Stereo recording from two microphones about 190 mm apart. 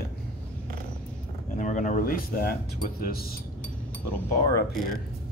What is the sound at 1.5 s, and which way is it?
Speech, 40° left (ahead or behind).